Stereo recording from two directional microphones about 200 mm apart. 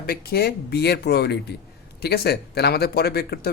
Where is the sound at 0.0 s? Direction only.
50° left (ahead or behind).